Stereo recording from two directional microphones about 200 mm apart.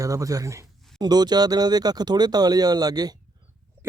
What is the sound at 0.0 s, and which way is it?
Speech, 15° right (ahead or behind).